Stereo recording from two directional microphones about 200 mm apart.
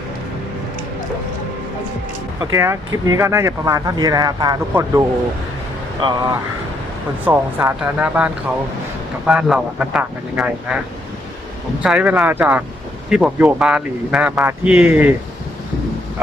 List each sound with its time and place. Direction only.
2.4 s speech: 15° right (ahead or behind)
6.0 s speech: 25° right (ahead or behind)
7.3 s speech: 10° right (ahead or behind)
11.8 s speech: 5° right (ahead or behind)